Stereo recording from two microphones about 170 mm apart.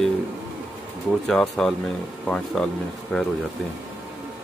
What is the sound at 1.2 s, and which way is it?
Speech, centre (ahead or behind).